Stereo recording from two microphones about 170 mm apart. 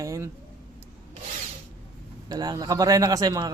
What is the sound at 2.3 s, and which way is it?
Speech, 25° right (ahead or behind).